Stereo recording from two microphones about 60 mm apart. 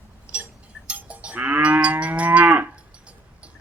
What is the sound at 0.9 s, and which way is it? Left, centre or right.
Livestock, right.